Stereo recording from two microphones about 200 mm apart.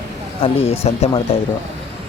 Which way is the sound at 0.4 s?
30° left (ahead or behind).